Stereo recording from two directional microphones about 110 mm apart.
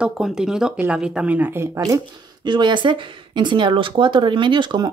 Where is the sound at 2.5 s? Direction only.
45° right (ahead or behind).